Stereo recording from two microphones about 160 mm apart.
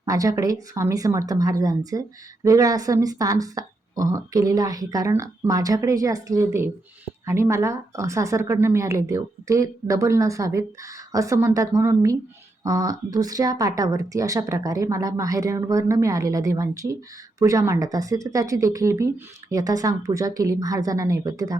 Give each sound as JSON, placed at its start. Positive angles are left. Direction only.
{"t": 0.0, "sound": "speech", "side_deg": -20}